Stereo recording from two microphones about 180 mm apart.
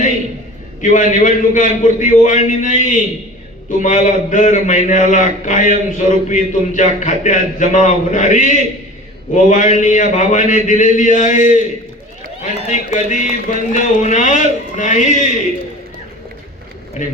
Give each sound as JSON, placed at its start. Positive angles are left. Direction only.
{"t": 0.8, "sound": "a man's voice", "side_deg": 45}